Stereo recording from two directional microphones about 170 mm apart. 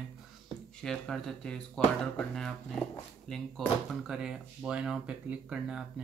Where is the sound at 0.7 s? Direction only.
5° left (ahead or behind).